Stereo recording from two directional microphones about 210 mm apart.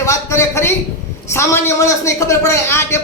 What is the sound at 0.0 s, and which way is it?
A man's voice, 15° left (ahead or behind).